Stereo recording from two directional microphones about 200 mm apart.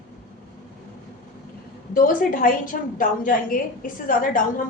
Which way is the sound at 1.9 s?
45° left (ahead or behind).